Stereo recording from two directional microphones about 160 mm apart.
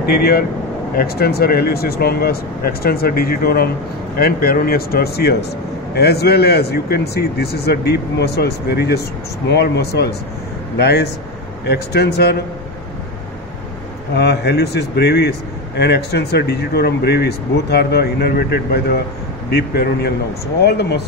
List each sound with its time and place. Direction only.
0.0 s a man's voice: 75° left (ahead or behind)
14.1 s a man's voice: 90° left